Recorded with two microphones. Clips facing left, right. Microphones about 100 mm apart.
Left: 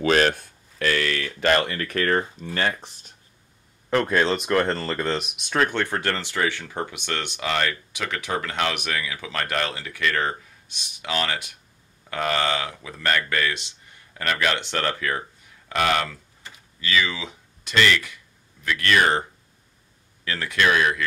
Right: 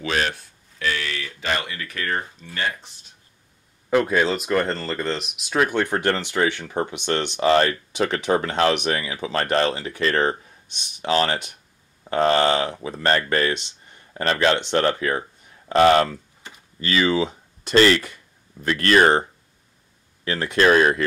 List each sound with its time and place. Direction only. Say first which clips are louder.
0.0 s a sound: left 5 dB; 45° left (ahead or behind)
2.5 s speech: left 2 dB; 50° left (ahead or behind)
3.9 s speech: right 2 dB; 10° right (ahead or behind)
7.3 s speech: right 9 dB; 35° right (ahead or behind)
20.2 s speech: right 4 dB; 25° right (ahead or behind)